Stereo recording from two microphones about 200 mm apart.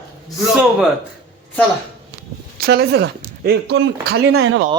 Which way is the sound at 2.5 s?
50° right (ahead or behind).